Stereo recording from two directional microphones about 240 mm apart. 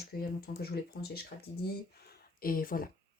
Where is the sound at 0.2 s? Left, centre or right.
Left.